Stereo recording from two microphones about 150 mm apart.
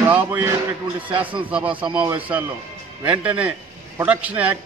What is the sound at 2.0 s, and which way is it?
A man's voice, 10° right (ahead or behind).